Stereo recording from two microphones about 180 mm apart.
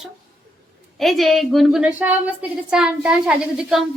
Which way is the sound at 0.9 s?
Centre (ahead or behind).